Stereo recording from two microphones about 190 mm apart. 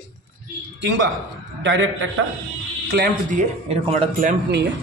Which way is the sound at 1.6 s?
90° right.